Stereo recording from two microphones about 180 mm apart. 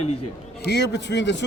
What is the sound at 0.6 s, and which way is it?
Speech, 75° left (ahead or behind).